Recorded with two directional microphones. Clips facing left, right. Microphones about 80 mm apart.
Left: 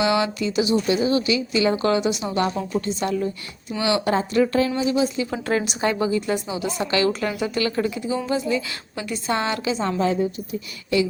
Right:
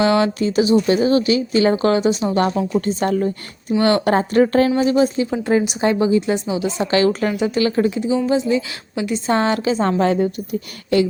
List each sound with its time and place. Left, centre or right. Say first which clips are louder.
0.0 s speech: right 5 dB; right
2.8 s speech: right 5 dB; right
5.3 s a woman's voice: right 6 dB; centre
9.3 s speech: right 5 dB; right
9.8 s a woman's voice: right 4 dB; right